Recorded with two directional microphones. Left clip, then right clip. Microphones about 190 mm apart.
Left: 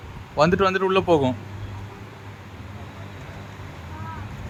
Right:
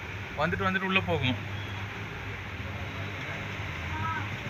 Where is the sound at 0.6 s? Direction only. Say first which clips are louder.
Left 7 dB; 50° left (ahead or behind).